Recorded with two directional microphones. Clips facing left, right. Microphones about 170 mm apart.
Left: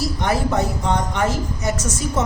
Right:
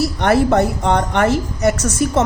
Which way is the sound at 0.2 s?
65° right (ahead or behind).